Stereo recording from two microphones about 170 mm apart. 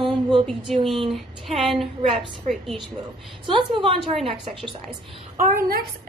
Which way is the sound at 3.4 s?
30° right (ahead or behind).